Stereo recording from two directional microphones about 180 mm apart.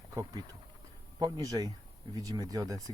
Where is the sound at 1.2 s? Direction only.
20° right (ahead or behind).